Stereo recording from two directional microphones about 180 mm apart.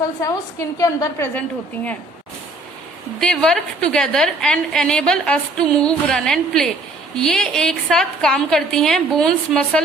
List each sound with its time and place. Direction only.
0.2 s a woman's voice: 20° left (ahead or behind)
3.2 s a woman's voice: centre (ahead or behind)